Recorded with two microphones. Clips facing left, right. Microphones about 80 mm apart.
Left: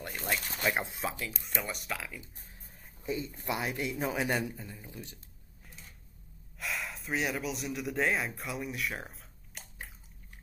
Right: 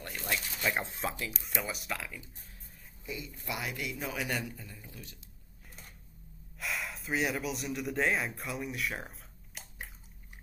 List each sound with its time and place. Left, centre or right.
0.4 s speech: left
0.7 s speech: centre
3.1 s a man's voice: left
6.6 s speech: centre